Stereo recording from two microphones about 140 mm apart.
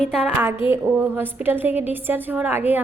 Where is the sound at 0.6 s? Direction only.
40° left (ahead or behind).